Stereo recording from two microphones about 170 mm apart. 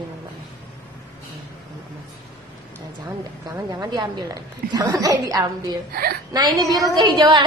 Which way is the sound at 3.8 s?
25° right (ahead or behind).